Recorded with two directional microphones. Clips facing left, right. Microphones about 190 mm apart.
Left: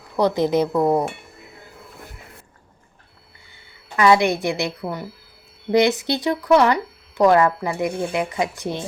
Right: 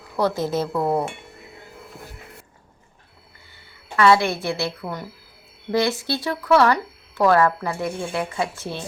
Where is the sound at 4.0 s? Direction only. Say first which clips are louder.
Left 1 dB; 15° left (ahead or behind).